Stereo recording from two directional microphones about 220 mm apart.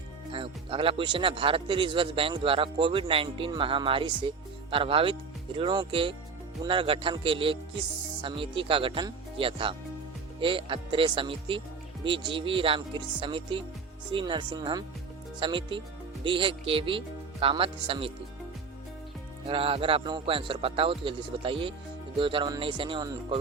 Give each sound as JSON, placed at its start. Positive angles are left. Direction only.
{"t": 0.3, "sound": "a man's voice", "side_deg": -25}
{"t": 19.5, "sound": "a man's voice", "side_deg": -25}